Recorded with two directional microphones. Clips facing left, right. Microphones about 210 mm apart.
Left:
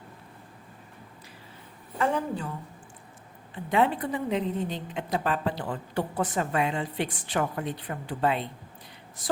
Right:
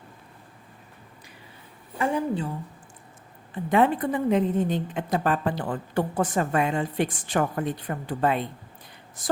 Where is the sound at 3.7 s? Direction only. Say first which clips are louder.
Right 4 dB; 50° right (ahead or behind).